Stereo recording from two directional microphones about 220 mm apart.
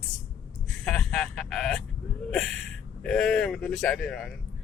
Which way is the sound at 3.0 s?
Centre (ahead or behind).